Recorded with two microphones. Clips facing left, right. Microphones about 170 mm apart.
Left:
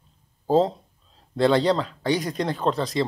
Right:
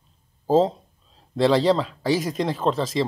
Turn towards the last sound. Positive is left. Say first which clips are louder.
# right 1 dB
turn(degrees=0)  # may be behind; listen again after turning